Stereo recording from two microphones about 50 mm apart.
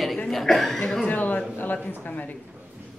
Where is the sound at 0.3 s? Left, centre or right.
Centre.